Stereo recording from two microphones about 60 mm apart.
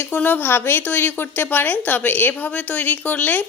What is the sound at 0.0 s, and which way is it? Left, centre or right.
A woman's voice, left.